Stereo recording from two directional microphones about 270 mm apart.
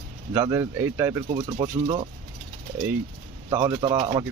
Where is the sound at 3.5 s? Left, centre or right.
Centre.